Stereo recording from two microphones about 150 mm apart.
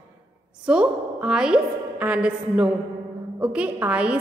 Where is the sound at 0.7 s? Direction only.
5° right (ahead or behind).